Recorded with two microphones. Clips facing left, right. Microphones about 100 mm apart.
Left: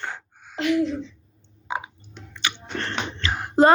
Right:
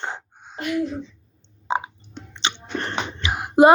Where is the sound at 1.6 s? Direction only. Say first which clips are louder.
Right 5 dB; 25° right (ahead or behind).